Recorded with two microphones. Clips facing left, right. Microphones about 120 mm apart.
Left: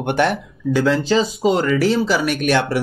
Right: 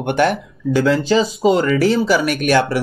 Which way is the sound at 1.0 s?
Centre (ahead or behind).